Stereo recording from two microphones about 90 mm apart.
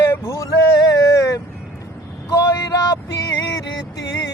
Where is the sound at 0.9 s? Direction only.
40° left (ahead or behind).